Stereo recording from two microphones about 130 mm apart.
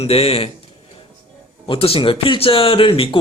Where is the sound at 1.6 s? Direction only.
45° left (ahead or behind).